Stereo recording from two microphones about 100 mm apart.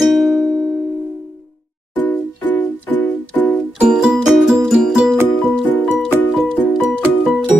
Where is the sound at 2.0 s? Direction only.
15° left (ahead or behind).